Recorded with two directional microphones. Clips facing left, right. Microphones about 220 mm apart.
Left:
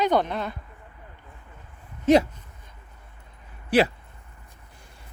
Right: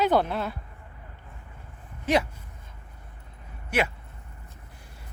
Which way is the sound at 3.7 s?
35° left (ahead or behind).